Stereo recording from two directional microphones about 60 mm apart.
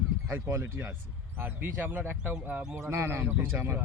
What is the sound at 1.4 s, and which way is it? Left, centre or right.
Speech, right.